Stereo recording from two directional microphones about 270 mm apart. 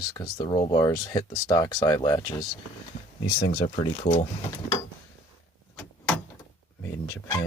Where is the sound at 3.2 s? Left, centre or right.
Left.